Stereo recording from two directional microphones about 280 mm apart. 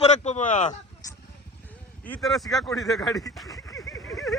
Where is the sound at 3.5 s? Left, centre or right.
Centre.